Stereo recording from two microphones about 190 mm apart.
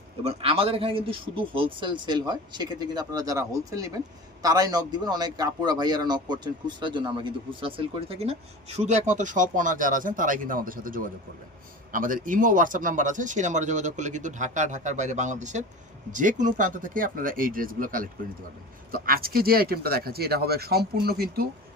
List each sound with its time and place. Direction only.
0.3 s speech: 30° right (ahead or behind); by 21.4 s 55° right (ahead or behind)